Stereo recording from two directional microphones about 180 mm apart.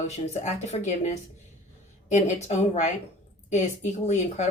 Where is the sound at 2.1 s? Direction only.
40° left (ahead or behind).